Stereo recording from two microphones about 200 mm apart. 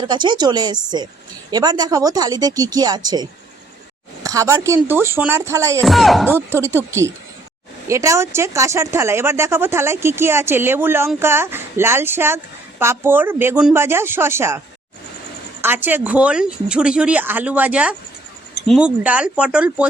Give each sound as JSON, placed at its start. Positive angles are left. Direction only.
{"t": 0.1, "sound": "speech", "side_deg": -20}
{"t": 5.8, "sound": "speech", "side_deg": 0}
{"t": 6.2, "sound": "speech", "side_deg": -10}
{"t": 15.6, "sound": "speech", "side_deg": -10}